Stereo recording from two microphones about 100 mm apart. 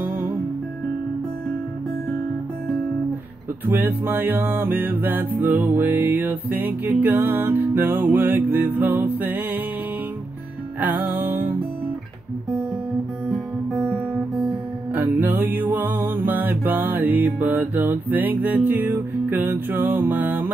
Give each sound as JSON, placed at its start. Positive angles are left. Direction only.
{"t": 0.0, "sound": "music", "side_deg": -20}
{"t": 3.6, "sound": "music", "side_deg": -20}
{"t": 10.8, "sound": "music", "side_deg": -20}
{"t": 15.0, "sound": "music", "side_deg": -20}